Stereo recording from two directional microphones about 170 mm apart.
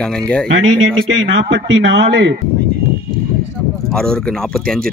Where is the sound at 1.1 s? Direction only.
90° right.